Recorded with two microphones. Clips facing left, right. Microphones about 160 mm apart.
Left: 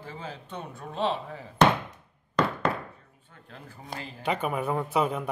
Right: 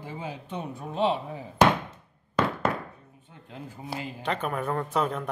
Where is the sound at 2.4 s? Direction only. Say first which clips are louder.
Even; 5° right (ahead or behind).